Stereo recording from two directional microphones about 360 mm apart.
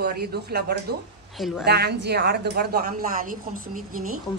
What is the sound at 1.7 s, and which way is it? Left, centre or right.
Speech, right.